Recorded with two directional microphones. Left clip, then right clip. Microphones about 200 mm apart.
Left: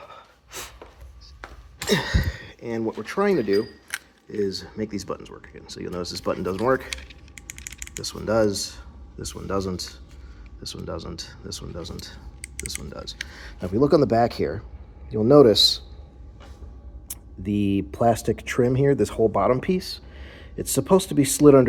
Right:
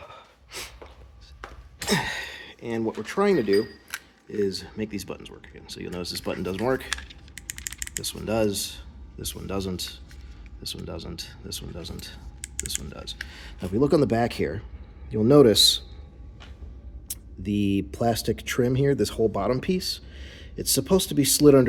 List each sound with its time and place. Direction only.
0.0 s gasp: centre (ahead or behind)
1.9 s gasp: centre (ahead or behind)
2.1 s a sound: 25° right (ahead or behind)
2.6 s speech: 5° right (ahead or behind)
8.1 s speech: 5° right (ahead or behind)
8.5 s speech: 20° right (ahead or behind)
9.3 s speech: 5° right (ahead or behind)
10.6 s speech: 20° right (ahead or behind)
11.2 s speech: 5° right (ahead or behind)
17.4 s speech: 10° right (ahead or behind)